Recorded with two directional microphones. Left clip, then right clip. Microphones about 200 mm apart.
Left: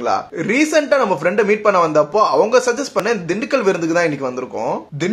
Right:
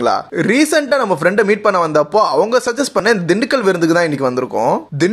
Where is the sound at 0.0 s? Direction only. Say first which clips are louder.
Right 4 dB; 45° right (ahead or behind).